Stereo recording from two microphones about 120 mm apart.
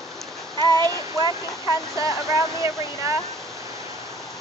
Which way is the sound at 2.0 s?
25° right (ahead or behind).